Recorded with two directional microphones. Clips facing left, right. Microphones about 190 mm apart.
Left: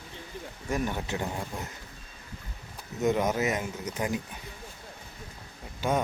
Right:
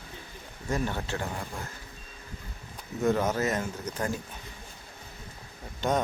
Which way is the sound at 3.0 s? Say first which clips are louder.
Even; 15° left (ahead or behind).